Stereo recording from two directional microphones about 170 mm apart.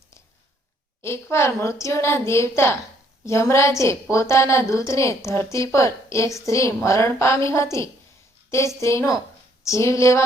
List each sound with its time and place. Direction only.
1.0 s a woman's voice: 15° left (ahead or behind)